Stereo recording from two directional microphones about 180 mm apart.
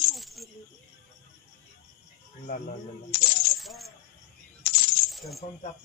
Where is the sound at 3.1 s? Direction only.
60° left (ahead or behind).